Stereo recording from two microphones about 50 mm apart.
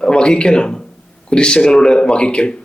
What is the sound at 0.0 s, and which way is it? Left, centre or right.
Speech, centre.